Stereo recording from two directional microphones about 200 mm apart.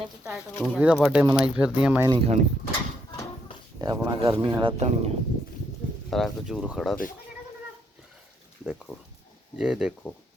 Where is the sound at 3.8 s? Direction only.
20° right (ahead or behind).